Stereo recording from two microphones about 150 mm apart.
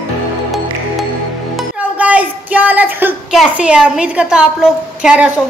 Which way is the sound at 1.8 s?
10° right (ahead or behind).